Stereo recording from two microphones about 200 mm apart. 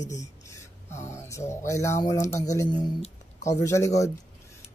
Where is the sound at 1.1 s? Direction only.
15° left (ahead or behind).